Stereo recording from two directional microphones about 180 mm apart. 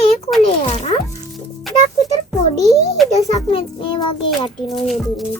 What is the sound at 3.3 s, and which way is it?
Speech, 30° left (ahead or behind).